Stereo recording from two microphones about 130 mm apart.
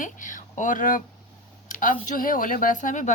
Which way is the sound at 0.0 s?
85° left.